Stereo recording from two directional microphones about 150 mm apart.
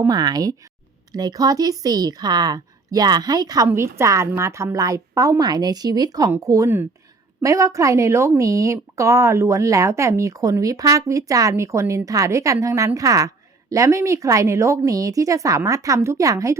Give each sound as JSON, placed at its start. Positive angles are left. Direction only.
{"t": 0.1, "sound": "speech", "side_deg": -30}